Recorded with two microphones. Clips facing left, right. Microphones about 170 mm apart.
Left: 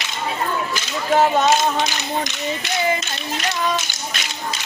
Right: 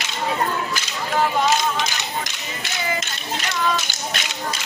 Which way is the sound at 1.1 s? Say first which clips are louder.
Left 4 dB; 45° left (ahead or behind).